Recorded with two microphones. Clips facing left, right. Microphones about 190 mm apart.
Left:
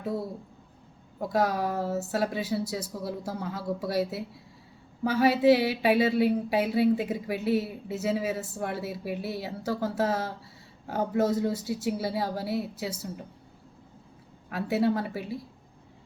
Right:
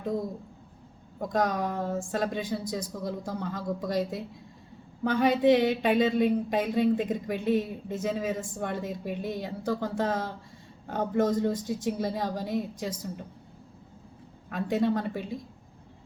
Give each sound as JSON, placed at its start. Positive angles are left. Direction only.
{"t": 0.0, "sound": "speech", "side_deg": 5}
{"t": 14.5, "sound": "speech", "side_deg": 5}